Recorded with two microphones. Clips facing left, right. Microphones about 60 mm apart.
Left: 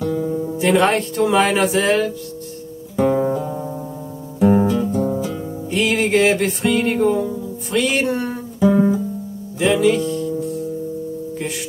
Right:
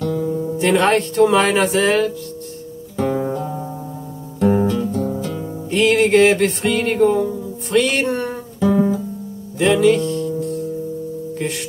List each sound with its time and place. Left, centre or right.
0.0 s music: centre
3.0 s guitar: centre
4.4 s music: centre